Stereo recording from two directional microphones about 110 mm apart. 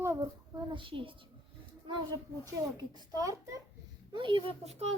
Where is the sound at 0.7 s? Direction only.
50° right (ahead or behind).